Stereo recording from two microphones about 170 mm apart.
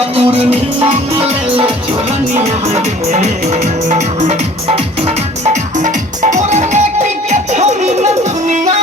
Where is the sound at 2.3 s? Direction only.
40° right (ahead or behind).